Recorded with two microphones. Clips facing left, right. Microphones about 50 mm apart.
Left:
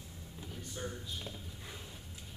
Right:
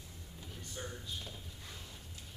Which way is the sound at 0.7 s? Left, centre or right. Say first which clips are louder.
Left 2 dB; centre.